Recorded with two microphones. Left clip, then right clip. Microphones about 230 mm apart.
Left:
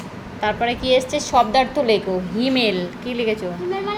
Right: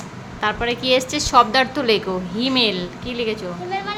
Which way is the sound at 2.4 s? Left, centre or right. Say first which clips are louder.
Right 1 dB; centre.